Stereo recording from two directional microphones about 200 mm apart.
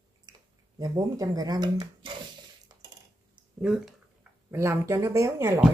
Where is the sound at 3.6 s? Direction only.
Centre (ahead or behind).